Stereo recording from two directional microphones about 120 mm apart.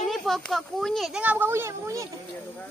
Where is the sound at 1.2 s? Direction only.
15° right (ahead or behind).